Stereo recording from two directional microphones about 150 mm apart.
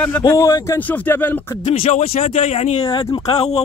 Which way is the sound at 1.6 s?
45° left (ahead or behind).